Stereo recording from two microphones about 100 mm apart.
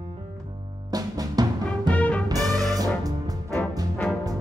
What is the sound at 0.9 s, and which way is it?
Music, 40° right (ahead or behind).